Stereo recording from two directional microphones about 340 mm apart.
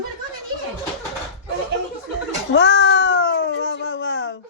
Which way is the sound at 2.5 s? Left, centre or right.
Left.